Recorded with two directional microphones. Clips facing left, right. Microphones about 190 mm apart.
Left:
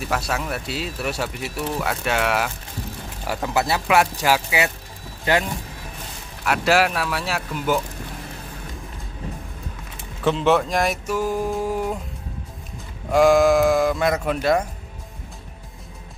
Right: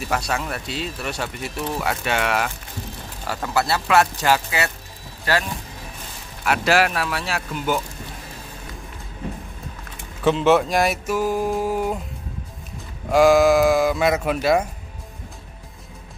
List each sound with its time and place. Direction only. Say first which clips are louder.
0.1 s speech: even; 5° left (ahead or behind)
3.3 s speech: even; 15° left (ahead or behind)
6.4 s speech: even; centre (ahead or behind)
10.2 s speech: right 2 dB; centre (ahead or behind)
13.1 s speech: right 1 dB; 5° right (ahead or behind)